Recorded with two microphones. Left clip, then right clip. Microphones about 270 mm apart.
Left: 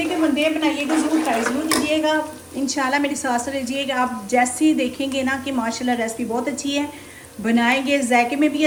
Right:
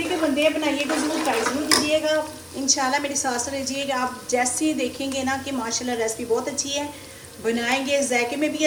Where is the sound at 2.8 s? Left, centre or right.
Left.